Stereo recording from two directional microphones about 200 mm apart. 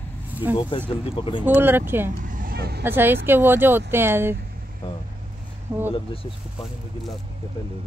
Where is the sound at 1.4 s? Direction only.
10° right (ahead or behind).